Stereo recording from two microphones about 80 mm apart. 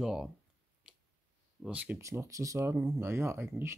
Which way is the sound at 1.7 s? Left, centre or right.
Centre.